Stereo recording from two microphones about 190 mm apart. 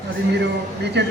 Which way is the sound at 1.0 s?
65° right (ahead or behind).